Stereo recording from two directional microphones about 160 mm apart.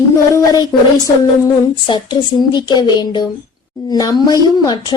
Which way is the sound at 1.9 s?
30° left (ahead or behind).